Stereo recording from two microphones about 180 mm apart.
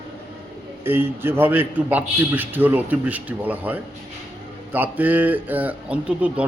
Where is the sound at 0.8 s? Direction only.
10° right (ahead or behind).